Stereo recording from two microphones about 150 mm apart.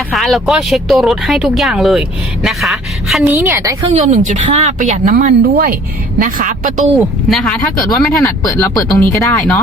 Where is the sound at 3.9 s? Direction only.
50° right (ahead or behind).